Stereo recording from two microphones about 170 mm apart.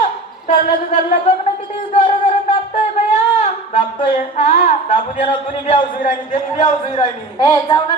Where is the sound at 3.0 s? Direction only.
40° left (ahead or behind).